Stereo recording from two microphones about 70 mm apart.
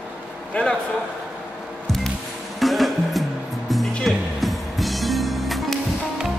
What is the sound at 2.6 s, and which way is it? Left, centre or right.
Music, centre.